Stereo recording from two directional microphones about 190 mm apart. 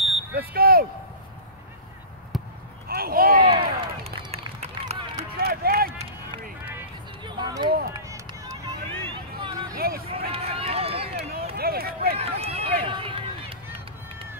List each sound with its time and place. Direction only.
0.4 s smoke detector: 50° right (ahead or behind)
2.3 s basketball bounce: centre (ahead or behind)
2.9 s a sound: 50° right (ahead or behind)
3.3 s run: 25° right (ahead or behind)
5.4 s run: 50° right (ahead or behind)
7.2 s a sound: 20° right (ahead or behind)
9.8 s run: 55° right (ahead or behind)
10.0 s run: 30° right (ahead or behind)
11.5 s run: 55° right (ahead or behind)
12.2 s run: 30° right (ahead or behind)